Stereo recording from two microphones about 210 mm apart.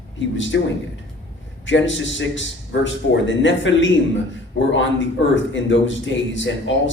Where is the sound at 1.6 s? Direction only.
60° left (ahead or behind).